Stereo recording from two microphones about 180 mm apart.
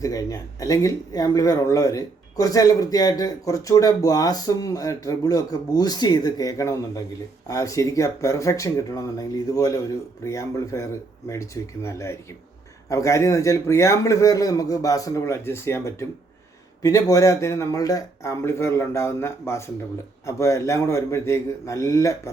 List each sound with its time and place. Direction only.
0.0 s a man's voice: 20° left (ahead or behind)